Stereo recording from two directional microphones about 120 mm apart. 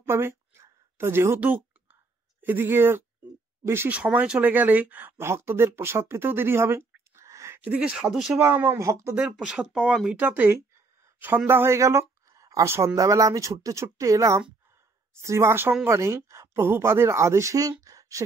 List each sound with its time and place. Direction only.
0.0 s a sound: 20° right (ahead or behind)
2.4 s speech: 20° right (ahead or behind)
7.7 s speech: 10° right (ahead or behind)
9.2 s speech: 5° right (ahead or behind); by 18.2 s 25° right (ahead or behind)